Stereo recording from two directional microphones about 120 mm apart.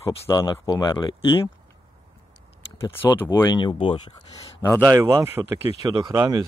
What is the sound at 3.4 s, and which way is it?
Speech, 40° left (ahead or behind).